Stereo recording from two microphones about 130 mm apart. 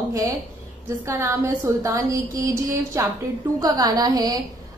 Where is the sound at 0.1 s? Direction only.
25° right (ahead or behind).